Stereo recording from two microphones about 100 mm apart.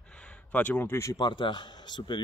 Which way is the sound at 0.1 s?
10° left (ahead or behind).